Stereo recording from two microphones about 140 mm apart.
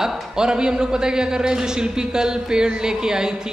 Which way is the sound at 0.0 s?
5° right (ahead or behind).